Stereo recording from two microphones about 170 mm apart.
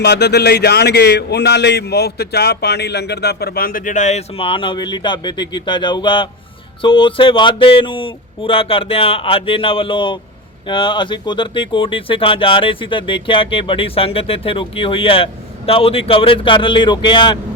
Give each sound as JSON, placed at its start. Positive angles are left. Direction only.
{"t": 0.0, "sound": "speech", "side_deg": 75}